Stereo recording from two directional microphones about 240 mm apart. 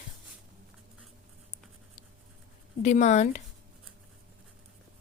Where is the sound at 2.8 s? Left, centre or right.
Left.